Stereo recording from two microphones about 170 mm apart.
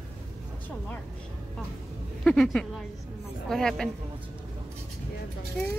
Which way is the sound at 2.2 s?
5° left (ahead or behind).